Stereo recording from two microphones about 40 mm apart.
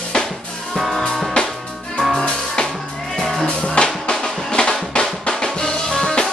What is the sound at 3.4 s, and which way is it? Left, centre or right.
Music, left.